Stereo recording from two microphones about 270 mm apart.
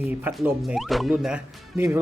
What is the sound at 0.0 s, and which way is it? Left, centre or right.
Speech, centre.